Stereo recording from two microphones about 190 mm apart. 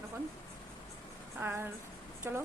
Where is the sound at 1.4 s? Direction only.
10° right (ahead or behind).